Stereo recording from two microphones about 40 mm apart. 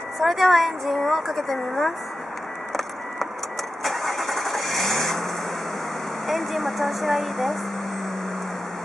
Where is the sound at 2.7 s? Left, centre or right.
Centre.